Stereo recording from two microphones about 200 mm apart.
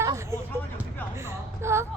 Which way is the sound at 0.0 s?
15° right (ahead or behind).